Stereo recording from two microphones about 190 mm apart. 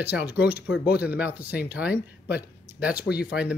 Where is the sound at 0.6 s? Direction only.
60° left (ahead or behind).